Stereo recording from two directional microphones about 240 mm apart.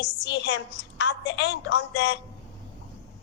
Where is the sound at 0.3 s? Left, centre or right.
Left.